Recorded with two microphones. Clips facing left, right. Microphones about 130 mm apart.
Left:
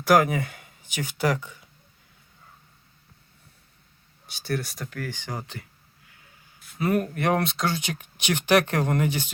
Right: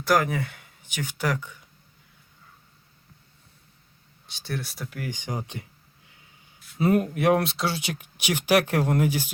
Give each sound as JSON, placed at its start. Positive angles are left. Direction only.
{"t": 0.3, "sound": "speech", "side_deg": 10}
{"t": 4.3, "sound": "speech", "side_deg": 5}
{"t": 6.7, "sound": "speech", "side_deg": -25}
{"t": 7.1, "sound": "speech", "side_deg": -5}